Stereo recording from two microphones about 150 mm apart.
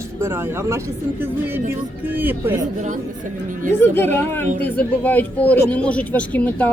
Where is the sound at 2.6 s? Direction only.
55° right (ahead or behind).